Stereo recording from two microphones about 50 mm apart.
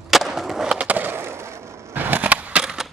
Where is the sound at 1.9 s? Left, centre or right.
Right.